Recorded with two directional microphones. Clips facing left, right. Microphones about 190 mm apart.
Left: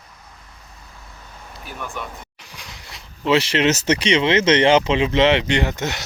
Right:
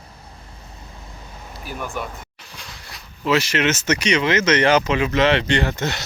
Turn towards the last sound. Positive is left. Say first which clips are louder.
# even
turn(degrees=15)  # may be behind; listen again after turning